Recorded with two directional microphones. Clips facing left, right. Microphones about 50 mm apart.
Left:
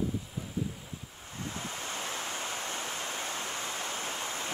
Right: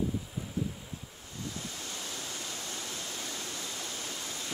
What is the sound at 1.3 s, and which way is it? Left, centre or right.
Waves, left.